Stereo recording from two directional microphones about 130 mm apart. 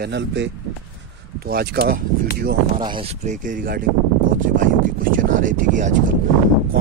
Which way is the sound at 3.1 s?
65° right (ahead or behind).